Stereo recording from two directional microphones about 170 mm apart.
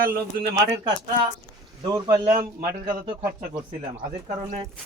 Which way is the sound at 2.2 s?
55° right (ahead or behind).